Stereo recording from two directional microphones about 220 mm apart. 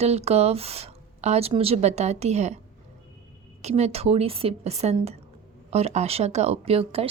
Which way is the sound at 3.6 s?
30° right (ahead or behind).